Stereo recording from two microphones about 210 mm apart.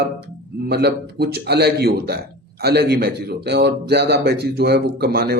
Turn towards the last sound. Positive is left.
turn(degrees=-50)  # may be behind; listen again after turning